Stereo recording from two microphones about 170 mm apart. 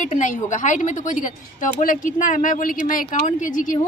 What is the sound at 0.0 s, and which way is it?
Speech, 45° left (ahead or behind).